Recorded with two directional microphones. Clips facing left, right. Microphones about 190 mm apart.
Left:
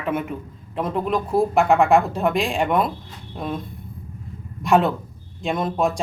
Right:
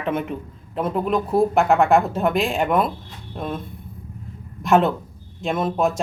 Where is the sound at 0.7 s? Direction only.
Centre (ahead or behind).